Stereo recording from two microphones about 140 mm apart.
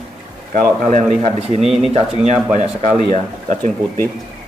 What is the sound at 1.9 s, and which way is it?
Speech, 45° right (ahead or behind).